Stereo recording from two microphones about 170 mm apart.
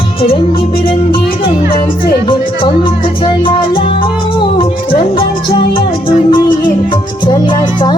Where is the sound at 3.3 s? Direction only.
30° left (ahead or behind).